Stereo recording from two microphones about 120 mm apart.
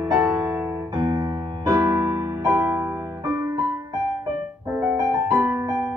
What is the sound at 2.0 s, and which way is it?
Music, 20° right (ahead or behind).